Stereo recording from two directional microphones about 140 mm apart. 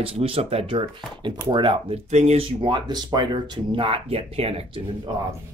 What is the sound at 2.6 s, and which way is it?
Speech, 35° right (ahead or behind).